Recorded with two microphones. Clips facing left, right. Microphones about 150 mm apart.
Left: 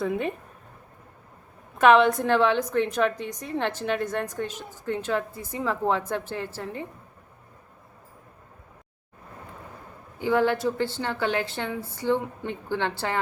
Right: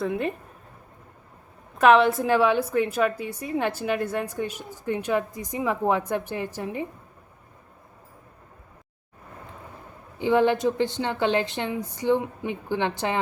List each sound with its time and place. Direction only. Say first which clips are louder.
0.0 s speech: even; centre (ahead or behind)
1.8 s a woman's voice: even; centre (ahead or behind)
10.2 s speech: right 2 dB; 20° right (ahead or behind)